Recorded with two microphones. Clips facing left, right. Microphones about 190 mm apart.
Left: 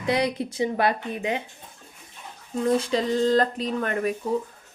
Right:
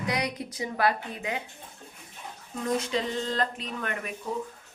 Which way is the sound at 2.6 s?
35° left (ahead or behind).